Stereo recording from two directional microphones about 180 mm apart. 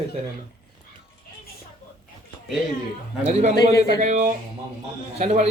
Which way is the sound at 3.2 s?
40° right (ahead or behind).